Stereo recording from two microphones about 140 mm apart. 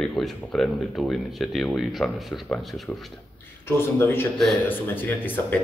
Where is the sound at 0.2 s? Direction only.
5° left (ahead or behind).